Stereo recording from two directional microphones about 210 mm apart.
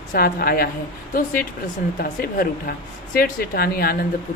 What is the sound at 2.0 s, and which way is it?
Speech, 45° left (ahead or behind).